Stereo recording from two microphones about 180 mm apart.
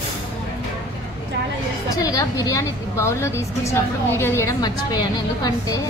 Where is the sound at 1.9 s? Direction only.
20° left (ahead or behind).